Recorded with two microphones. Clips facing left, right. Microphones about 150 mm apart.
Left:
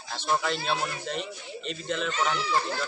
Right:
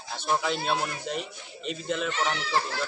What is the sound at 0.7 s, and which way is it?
Speech, 5° right (ahead or behind).